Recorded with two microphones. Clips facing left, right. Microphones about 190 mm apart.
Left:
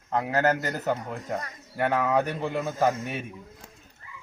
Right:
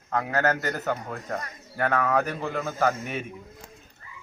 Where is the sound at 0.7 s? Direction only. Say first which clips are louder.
Left 1 dB; 15° left (ahead or behind).